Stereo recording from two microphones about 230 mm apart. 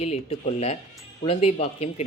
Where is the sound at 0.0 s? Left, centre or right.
Left.